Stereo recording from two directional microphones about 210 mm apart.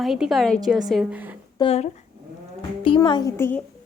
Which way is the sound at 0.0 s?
Centre (ahead or behind).